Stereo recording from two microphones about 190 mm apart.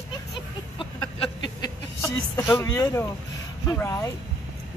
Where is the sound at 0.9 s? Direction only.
20° left (ahead or behind).